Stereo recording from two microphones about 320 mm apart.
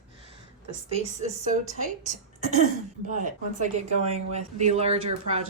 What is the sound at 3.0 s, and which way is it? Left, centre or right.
Speech, right.